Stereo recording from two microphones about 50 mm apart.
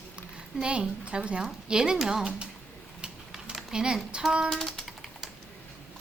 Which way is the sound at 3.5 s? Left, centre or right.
Centre.